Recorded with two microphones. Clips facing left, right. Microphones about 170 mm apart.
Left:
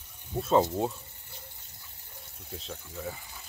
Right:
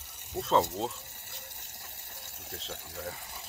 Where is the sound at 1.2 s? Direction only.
80° right.